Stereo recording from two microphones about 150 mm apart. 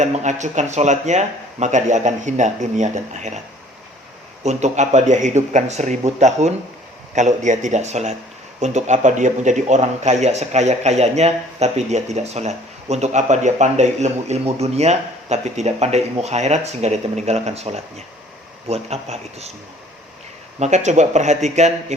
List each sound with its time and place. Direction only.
0.0 s a man's voice: 50° right (ahead or behind)
4.4 s a man's voice: 50° right (ahead or behind)
20.6 s a man's voice: 50° right (ahead or behind)